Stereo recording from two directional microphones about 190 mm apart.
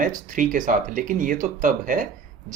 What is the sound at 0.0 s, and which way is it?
Speech, 45° right (ahead or behind).